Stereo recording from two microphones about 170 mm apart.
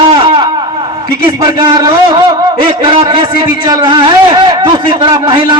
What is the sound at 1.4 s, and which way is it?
A man's voice, 25° right (ahead or behind).